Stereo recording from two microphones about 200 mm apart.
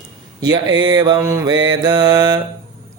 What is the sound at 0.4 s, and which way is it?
Mantra, 20° right (ahead or behind).